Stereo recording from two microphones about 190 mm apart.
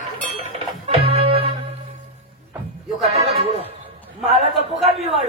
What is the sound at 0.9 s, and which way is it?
Music, 30° right (ahead or behind).